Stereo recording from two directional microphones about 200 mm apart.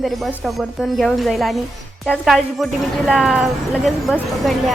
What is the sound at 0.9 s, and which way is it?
A woman's voice, centre (ahead or behind).